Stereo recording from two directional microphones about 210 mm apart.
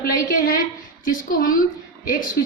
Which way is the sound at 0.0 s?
45° left (ahead or behind).